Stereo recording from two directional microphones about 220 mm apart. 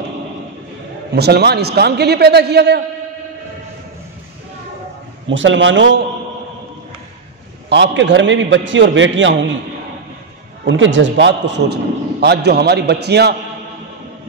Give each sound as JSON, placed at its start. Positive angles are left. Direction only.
{"t": 1.1, "sound": "a man's voice", "side_deg": -45}
{"t": 5.3, "sound": "a man's voice", "side_deg": -60}
{"t": 7.7, "sound": "a man's voice", "side_deg": -55}
{"t": 10.6, "sound": "a man's voice", "side_deg": -55}